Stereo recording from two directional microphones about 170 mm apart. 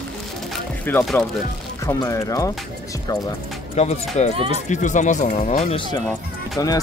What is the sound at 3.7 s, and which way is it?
Speech, 40° left (ahead or behind).